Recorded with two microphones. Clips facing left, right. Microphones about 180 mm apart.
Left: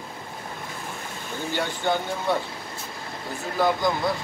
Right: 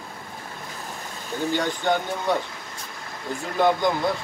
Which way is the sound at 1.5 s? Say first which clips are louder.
Right 2 dB; 15° right (ahead or behind).